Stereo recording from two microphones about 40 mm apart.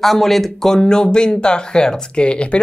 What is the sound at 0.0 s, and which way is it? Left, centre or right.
Speech, centre.